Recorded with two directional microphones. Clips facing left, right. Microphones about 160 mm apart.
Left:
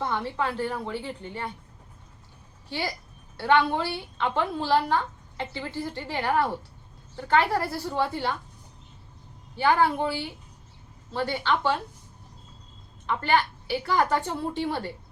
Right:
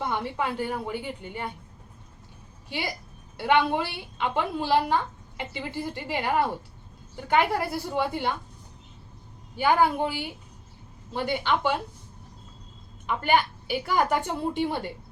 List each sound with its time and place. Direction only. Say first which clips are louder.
0.0 s a woman's voice: even; 20° right (ahead or behind)
2.6 s a woman's voice: left 1 dB; 15° right (ahead or behind)
9.6 s a woman's voice: even; 15° right (ahead or behind)
13.1 s a woman's voice: right 1 dB; 15° right (ahead or behind)